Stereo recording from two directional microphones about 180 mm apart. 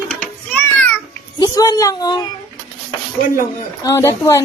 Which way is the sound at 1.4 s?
20° left (ahead or behind).